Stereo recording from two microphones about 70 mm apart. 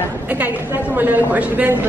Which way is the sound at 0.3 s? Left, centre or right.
Right.